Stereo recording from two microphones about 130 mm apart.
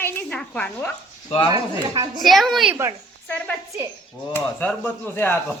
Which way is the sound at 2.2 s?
Centre (ahead or behind).